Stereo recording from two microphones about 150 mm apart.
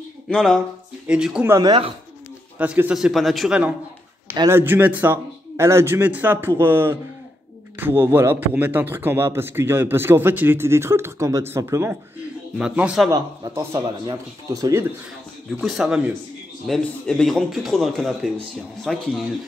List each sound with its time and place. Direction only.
0.3 s a man's voice: 5° left (ahead or behind)
1.5 s speech: 25° right (ahead or behind)
2.6 s a man's voice: 10° right (ahead or behind)
12.5 s a man's voice: 5° right (ahead or behind)
13.5 s a man's voice: 15° right (ahead or behind)
15.6 s a man's voice: centre (ahead or behind)